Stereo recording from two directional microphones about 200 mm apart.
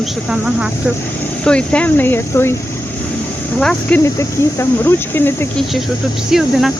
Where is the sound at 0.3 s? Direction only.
5° right (ahead or behind).